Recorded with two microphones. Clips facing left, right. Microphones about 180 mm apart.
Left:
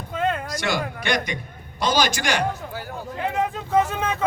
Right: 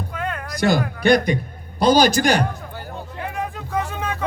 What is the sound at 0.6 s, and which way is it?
A man's voice, 35° right (ahead or behind).